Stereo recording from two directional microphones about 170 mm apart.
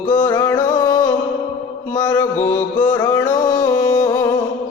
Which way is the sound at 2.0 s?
25° left (ahead or behind).